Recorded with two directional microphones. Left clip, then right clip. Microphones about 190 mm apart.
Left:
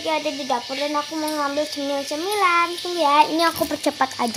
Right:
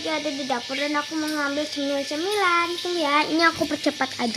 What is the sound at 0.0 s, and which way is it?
Speech, 20° right (ahead or behind).